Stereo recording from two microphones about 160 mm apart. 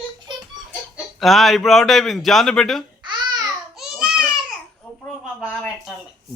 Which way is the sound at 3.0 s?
25° right (ahead or behind).